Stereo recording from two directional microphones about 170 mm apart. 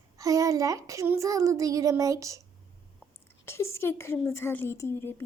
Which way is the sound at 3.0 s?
15° left (ahead or behind).